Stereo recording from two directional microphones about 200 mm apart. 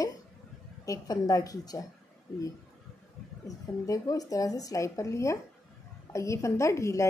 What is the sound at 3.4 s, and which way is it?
A woman's voice, 15° left (ahead or behind).